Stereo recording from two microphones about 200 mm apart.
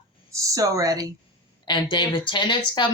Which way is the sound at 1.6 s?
20° left (ahead or behind).